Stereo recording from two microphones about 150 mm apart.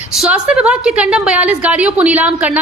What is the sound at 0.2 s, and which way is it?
A woman's voice, 5° right (ahead or behind).